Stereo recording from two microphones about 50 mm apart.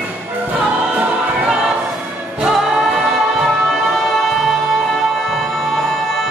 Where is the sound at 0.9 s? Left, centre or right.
Right.